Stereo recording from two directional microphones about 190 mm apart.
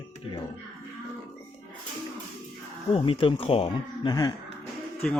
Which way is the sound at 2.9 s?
30° left (ahead or behind).